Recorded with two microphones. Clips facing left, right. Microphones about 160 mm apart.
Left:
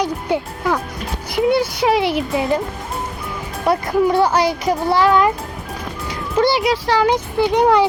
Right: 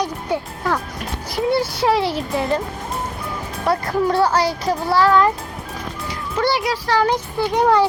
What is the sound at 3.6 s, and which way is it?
A child's voice, 20° left (ahead or behind).